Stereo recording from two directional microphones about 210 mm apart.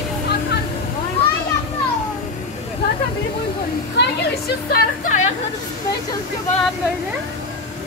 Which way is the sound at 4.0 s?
50° left (ahead or behind).